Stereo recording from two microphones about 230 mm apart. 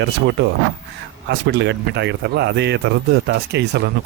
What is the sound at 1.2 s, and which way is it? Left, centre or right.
Speech, right.